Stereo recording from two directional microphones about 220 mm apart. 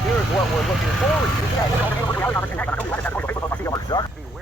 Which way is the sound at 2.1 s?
10° left (ahead or behind).